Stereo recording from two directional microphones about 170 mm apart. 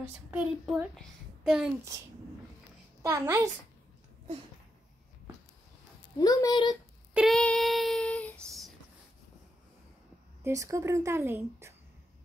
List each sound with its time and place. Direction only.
0.3 s a child's voice: 5° right (ahead or behind)
3.0 s speech: 15° right (ahead or behind)
6.1 s a woman's voice: 20° left (ahead or behind)
7.2 s child singing: centre (ahead or behind)
10.4 s speech: 20° right (ahead or behind)